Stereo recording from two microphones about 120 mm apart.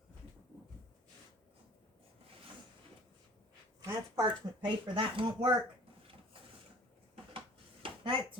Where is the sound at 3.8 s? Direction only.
30° right (ahead or behind).